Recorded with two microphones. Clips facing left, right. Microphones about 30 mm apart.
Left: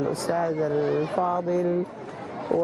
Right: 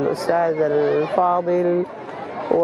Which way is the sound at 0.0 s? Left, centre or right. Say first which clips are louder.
Right 6 dB; right.